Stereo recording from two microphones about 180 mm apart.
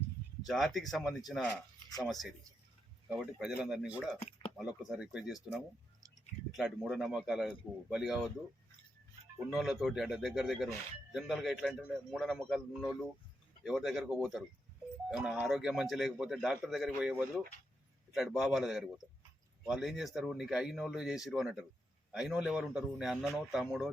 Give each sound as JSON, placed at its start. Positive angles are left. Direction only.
{"t": 0.4, "sound": "a man's voice", "side_deg": 0}
{"t": 4.2, "sound": "a sound", "side_deg": 35}
{"t": 4.5, "sound": "a man's voice", "side_deg": 0}
{"t": 9.5, "sound": "a man's voice", "side_deg": 0}